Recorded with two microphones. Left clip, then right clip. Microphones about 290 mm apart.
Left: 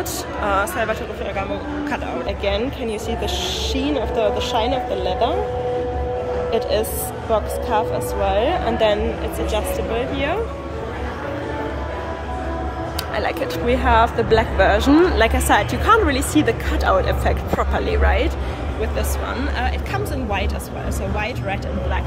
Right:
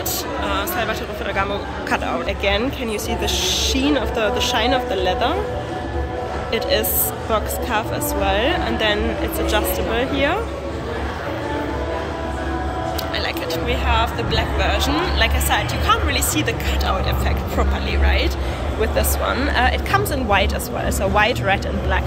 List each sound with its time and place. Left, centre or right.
0.5 s a woman's voice: centre
6.5 s a woman's voice: centre
13.1 s speech: centre
18.8 s speech: centre